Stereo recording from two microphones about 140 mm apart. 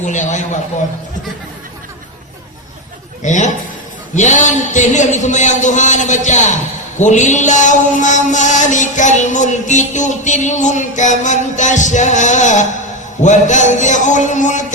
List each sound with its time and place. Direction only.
0.0 s mantra: 60° left (ahead or behind)
3.2 s mantra: 60° left (ahead or behind)